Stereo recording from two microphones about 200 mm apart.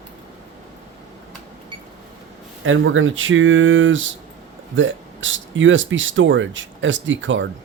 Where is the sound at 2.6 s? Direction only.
80° right.